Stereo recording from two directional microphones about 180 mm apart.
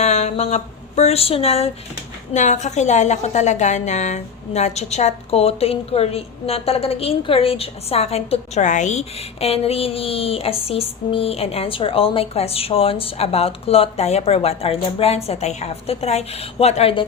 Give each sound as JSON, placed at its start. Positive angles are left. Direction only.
{"t": 0.0, "sound": "a woman's voice", "side_deg": 35}